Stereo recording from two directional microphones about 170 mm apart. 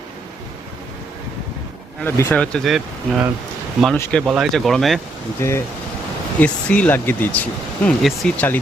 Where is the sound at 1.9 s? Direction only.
15° left (ahead or behind).